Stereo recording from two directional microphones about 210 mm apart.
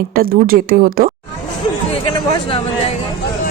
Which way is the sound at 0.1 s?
45° right (ahead or behind).